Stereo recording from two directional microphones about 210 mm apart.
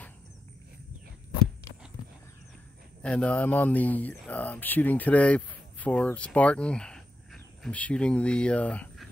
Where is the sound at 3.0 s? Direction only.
5° left (ahead or behind).